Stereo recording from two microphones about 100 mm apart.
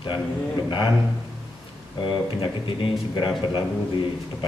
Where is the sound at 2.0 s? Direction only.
55° left (ahead or behind).